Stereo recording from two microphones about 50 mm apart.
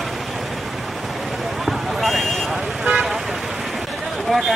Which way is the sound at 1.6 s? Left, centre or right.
Centre.